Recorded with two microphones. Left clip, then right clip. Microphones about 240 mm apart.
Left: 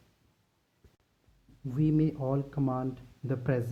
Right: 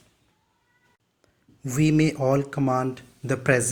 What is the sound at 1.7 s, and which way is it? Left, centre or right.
Speech, centre.